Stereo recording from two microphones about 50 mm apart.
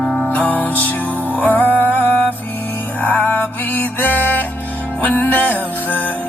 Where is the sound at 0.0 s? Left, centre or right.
Centre.